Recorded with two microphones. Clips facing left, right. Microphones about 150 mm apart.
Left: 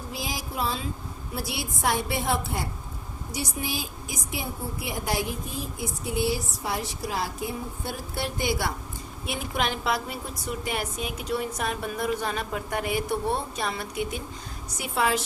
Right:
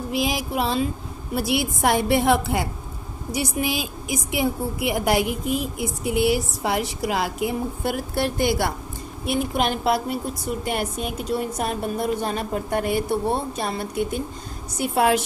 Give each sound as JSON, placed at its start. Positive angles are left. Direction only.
{"t": 0.1, "sound": "a woman's voice", "side_deg": -75}
{"t": 11.2, "sound": "a woman's voice", "side_deg": -40}
{"t": 14.8, "sound": "a woman's voice", "side_deg": -60}